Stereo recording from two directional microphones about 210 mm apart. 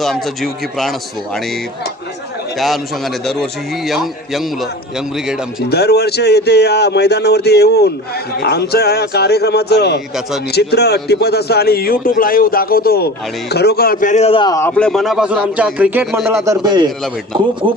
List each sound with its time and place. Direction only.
0.0 s a man's voice: centre (ahead or behind)
2.6 s a man's voice: centre (ahead or behind)
5.6 s a man's voice: 50° left (ahead or behind); by 16.4 s 5° right (ahead or behind)
16.4 s a man's voice: 20° right (ahead or behind)